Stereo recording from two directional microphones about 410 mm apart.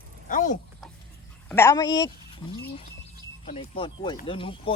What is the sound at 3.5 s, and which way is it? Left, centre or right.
Speech, centre.